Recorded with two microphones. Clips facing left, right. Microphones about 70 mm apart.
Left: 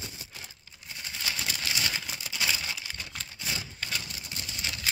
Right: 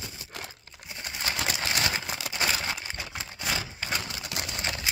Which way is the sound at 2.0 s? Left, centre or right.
Right.